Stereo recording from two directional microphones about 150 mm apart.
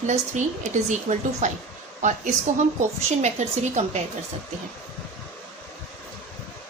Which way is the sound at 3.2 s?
50° right (ahead or behind).